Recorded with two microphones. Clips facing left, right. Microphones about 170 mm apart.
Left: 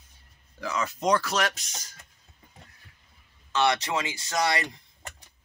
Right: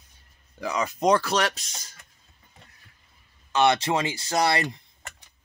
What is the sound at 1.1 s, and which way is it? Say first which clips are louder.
Speech: right 1 dB; 35° right (ahead or behind).